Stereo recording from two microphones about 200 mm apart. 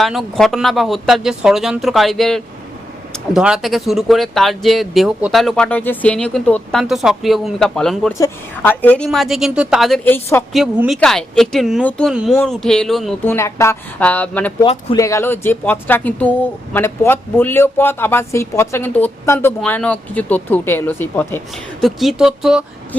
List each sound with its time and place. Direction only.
0.0 s speech: centre (ahead or behind)
10.5 s speech: centre (ahead or behind)
13.2 s speech: 15° left (ahead or behind)
14.6 s speech: 30° left (ahead or behind)
14.9 s speech: 15° left (ahead or behind); by 22.6 s 5° right (ahead or behind)